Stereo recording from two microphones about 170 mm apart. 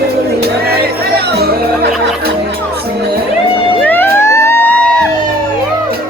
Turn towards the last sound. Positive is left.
turn(degrees=10)  # may be behind; listen again after turning